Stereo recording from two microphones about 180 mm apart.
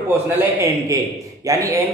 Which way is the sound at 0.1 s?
15° right (ahead or behind).